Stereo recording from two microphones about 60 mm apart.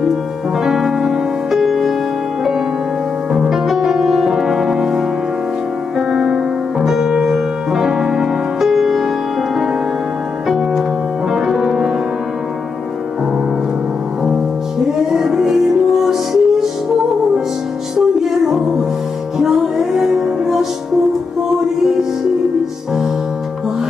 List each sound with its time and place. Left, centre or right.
0.7 s music: centre
3.3 s music: centre
11.3 s music: centre
14.9 s music: centre
17.9 s music: centre